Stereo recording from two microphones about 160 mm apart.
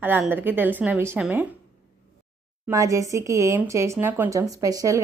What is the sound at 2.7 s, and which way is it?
Speech, 20° right (ahead or behind).